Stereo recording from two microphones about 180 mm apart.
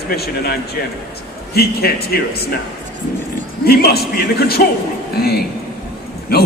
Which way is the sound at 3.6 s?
60° left (ahead or behind).